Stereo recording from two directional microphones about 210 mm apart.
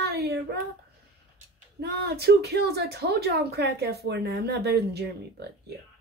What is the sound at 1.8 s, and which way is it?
Speech, 50° right (ahead or behind).